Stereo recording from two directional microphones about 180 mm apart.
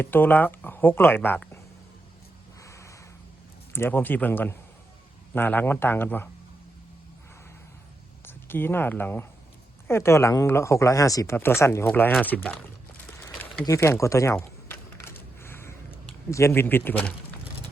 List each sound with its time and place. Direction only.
0.0 s speech: 10° left (ahead or behind)
2.6 s a sound: 15° left (ahead or behind)
3.7 s speech: 10° left (ahead or behind)
8.2 s speech: 10° left (ahead or behind)
13.1 s a sound: 10° left (ahead or behind)
15.0 s crushing: 15° left (ahead or behind)
16.3 s speech: 15° left (ahead or behind)